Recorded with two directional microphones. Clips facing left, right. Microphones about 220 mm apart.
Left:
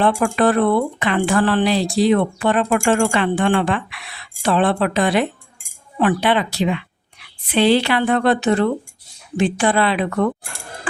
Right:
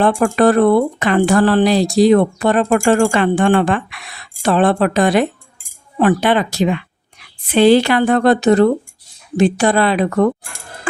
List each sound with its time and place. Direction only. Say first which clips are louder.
0.0 s a woman's voice: right 4 dB; 45° right (ahead or behind)